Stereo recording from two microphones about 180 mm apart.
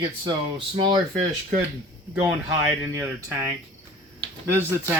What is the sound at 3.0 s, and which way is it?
Speech, 15° right (ahead or behind).